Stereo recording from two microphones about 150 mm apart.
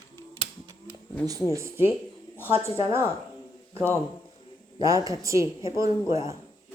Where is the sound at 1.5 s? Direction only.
15° right (ahead or behind).